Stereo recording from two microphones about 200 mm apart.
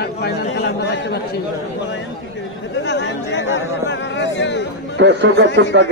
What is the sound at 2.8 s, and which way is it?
Chatter, 60° left (ahead or behind).